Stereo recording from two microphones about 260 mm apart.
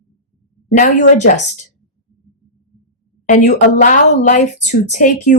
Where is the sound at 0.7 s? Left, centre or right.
Left.